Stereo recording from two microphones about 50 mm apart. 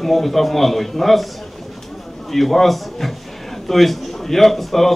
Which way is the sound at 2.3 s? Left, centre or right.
Centre.